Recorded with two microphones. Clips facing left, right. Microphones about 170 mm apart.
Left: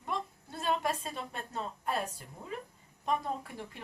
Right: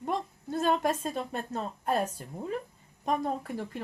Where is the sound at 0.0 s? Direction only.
40° right (ahead or behind).